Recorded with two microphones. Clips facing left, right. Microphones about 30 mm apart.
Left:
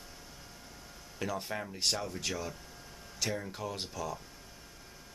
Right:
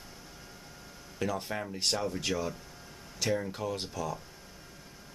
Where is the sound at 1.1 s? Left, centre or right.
Centre.